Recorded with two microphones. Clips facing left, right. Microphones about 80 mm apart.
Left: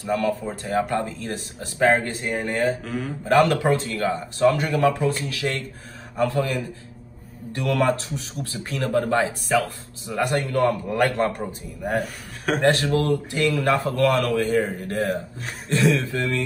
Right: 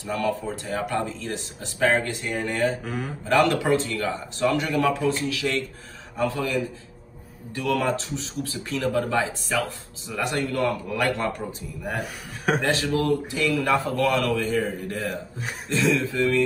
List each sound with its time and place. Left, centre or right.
0.0 s speech: left
2.8 s speech: centre
3.3 s speech: left
12.0 s a man's voice: centre
12.8 s speech: left
13.8 s speech: left